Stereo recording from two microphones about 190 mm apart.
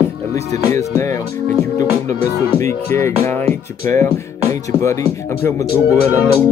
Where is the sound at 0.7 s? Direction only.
15° left (ahead or behind).